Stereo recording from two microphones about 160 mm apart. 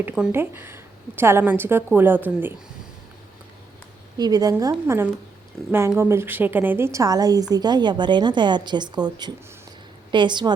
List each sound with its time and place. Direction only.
0.0 s a woman's voice: 15° right (ahead or behind)
4.2 s a woman's voice: 25° right (ahead or behind)
5.6 s speech: centre (ahead or behind)
6.0 s a woman's voice: 15° right (ahead or behind)